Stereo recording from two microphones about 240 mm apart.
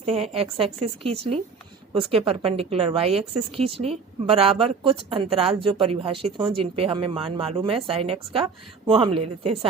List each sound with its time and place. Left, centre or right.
0.0 s a woman's voice: right